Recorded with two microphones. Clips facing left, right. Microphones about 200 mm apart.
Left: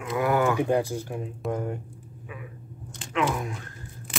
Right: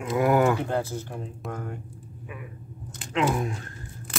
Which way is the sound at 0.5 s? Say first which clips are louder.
Left 4 dB; 15° left (ahead or behind).